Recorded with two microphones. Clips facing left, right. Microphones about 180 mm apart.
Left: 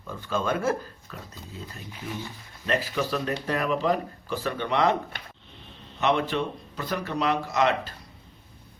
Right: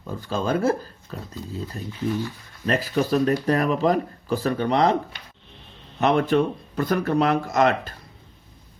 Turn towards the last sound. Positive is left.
turn(degrees=-45)  # may be behind; listen again after turning